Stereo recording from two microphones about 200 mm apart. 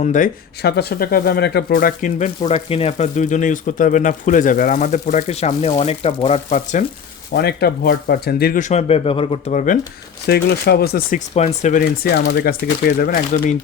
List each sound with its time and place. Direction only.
0.0 s speech: 40° left (ahead or behind)
0.6 s speech: 55° left (ahead or behind); by 6.8 s 35° left (ahead or behind)
7.3 s speech: 50° left (ahead or behind)
10.2 s speech: 55° left (ahead or behind)
11.3 s speech: 35° left (ahead or behind)